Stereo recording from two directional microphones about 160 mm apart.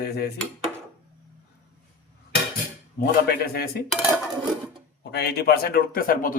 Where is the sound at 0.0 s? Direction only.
85° left.